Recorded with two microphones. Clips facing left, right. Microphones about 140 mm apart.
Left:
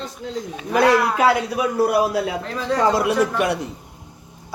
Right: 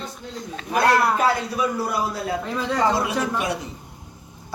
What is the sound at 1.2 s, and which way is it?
A man's voice, 70° left (ahead or behind).